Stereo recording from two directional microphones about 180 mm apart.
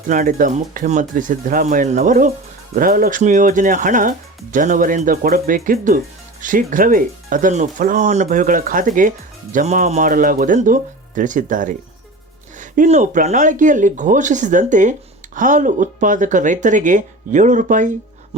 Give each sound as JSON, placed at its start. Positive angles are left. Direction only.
{"t": 0.1, "sound": "speech", "side_deg": -45}